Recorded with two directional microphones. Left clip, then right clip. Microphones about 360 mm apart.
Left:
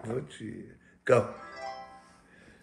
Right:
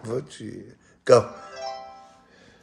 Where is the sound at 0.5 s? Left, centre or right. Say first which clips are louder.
Right 5 dB; centre.